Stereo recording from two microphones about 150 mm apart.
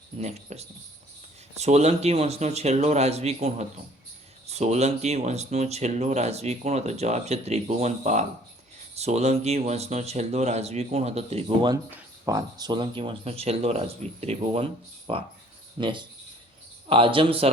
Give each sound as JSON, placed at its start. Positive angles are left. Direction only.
{"t": 0.2, "sound": "speech", "side_deg": -45}
{"t": 12.2, "sound": "speech", "side_deg": -25}